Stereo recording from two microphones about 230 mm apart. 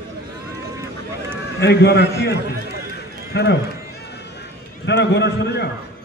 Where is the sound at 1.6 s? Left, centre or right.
Left.